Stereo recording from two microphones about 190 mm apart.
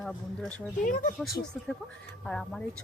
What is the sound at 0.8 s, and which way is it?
Speech, 45° left (ahead or behind).